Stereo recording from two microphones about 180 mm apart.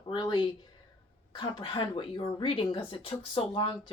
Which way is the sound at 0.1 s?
25° left (ahead or behind).